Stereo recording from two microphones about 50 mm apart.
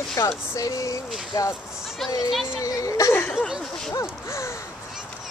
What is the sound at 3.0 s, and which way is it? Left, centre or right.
Speech, left.